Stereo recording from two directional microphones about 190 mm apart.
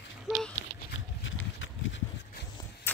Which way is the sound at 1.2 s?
90° left.